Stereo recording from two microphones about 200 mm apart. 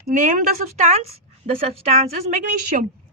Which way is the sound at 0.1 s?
40° right (ahead or behind).